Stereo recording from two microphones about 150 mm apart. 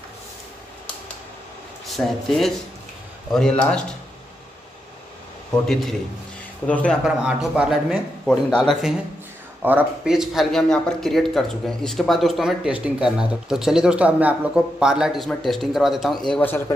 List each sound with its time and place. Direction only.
1.9 s speech: centre (ahead or behind)
6.7 s speech: 10° left (ahead or behind)
7.1 s speech: 5° right (ahead or behind)
8.3 s speech: 5° left (ahead or behind)
9.6 s speech: 10° right (ahead or behind); by 16.6 s 10° left (ahead or behind)